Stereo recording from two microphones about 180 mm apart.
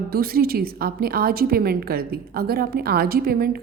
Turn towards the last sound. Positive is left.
turn(degrees=-60)  # may be behind; listen again after turning